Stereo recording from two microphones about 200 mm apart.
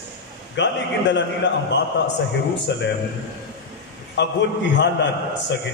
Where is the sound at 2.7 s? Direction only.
60° left (ahead or behind).